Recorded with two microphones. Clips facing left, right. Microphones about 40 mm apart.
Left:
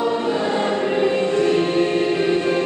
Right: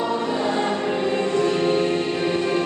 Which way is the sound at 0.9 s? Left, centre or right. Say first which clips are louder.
Left 5 dB; centre.